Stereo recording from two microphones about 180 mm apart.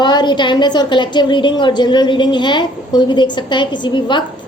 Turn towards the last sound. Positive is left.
turn(degrees=25)  # may be behind; listen again after turning